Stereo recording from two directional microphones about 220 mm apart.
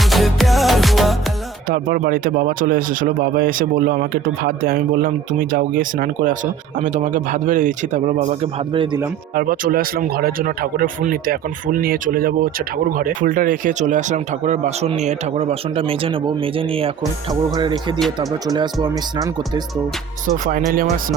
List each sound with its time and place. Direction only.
0.0 s music: centre (ahead or behind)
1.7 s speech: 40° right (ahead or behind); by 9.0 s 25° right (ahead or behind)
9.3 s speech: 40° right (ahead or behind); by 19.6 s 20° right (ahead or behind)
20.2 s speech: 40° right (ahead or behind)